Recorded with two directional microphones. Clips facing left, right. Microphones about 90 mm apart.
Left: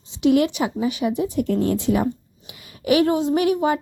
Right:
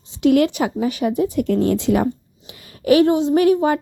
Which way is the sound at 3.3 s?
40° right (ahead or behind).